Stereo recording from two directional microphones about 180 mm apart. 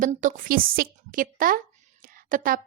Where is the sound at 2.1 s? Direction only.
50° right (ahead or behind).